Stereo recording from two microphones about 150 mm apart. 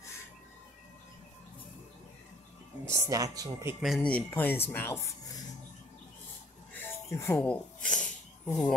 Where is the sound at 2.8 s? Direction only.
20° right (ahead or behind).